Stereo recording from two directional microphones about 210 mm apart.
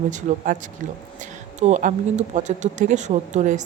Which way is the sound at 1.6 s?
35° right (ahead or behind).